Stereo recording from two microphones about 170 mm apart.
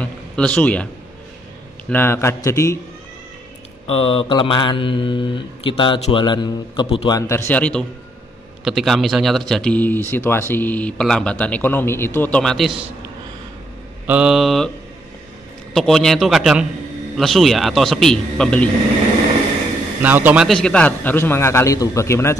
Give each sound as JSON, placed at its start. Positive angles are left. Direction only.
{"t": 0.0, "sound": "a sound", "side_deg": 5}
{"t": 1.9, "sound": "a man's voice", "side_deg": 15}
{"t": 3.8, "sound": "mantra", "side_deg": 35}
{"t": 7.2, "sound": "a man's voice", "side_deg": 15}
{"t": 14.0, "sound": "a man's voice", "side_deg": -5}
{"t": 15.7, "sound": "a man's voice", "side_deg": 0}
{"t": 20.0, "sound": "a man's voice", "side_deg": -10}
{"t": 20.4, "sound": "a man's voice", "side_deg": 5}